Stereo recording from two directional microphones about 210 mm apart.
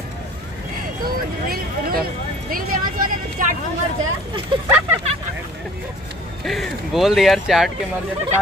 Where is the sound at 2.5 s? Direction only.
40° right (ahead or behind).